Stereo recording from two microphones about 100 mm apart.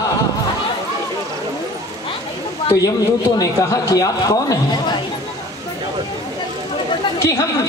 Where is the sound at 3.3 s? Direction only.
40° left (ahead or behind).